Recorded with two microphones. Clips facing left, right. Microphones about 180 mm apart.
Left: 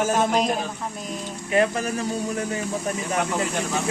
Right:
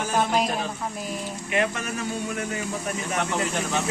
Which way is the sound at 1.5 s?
35° left (ahead or behind).